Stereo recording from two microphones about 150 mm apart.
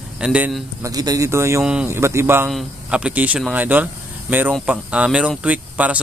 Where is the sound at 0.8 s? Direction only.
25° right (ahead or behind).